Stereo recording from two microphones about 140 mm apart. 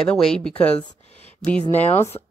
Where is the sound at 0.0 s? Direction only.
5° left (ahead or behind).